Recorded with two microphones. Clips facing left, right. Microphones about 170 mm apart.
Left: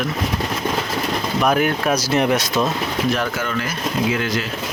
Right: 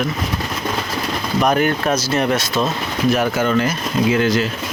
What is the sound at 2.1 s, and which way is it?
Speech, 15° left (ahead or behind).